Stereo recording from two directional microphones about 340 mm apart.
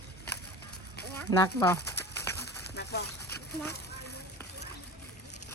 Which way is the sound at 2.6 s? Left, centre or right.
Left.